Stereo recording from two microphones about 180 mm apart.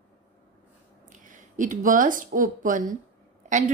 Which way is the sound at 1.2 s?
45° right (ahead or behind).